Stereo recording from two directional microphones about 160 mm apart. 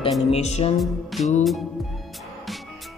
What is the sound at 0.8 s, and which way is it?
Speech, centre (ahead or behind).